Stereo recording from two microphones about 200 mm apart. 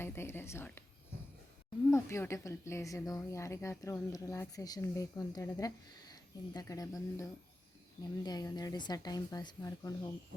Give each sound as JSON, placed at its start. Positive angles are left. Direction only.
{"t": 0.0, "sound": "a woman's voice", "side_deg": 10}
{"t": 1.9, "sound": "a woman's voice", "side_deg": 15}